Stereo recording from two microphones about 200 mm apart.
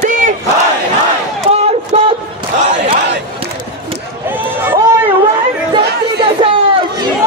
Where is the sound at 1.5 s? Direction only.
30° right (ahead or behind).